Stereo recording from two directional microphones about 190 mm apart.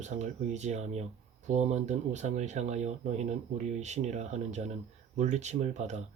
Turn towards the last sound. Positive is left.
turn(degrees=-35)  # may be behind; listen again after turning